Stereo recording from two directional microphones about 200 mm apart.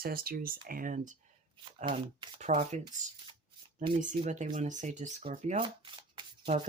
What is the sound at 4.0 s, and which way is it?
Speech, 40° right (ahead or behind).